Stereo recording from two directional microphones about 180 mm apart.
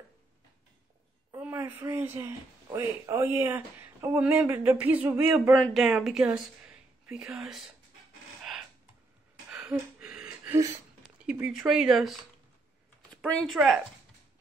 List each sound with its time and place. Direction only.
1.3 s a man's voice: 15° right (ahead or behind)
9.5 s a sound: 5° right (ahead or behind)
11.0 s speech: 5° right (ahead or behind)